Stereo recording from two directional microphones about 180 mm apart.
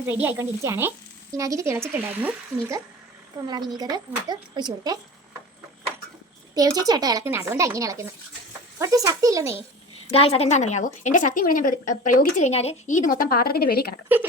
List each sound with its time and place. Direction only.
0.1 s speech: 10° right (ahead or behind)
6.5 s speech: 20° right (ahead or behind)
10.1 s a woman's voice: 35° left (ahead or behind); by 13.9 s 60° left (ahead or behind)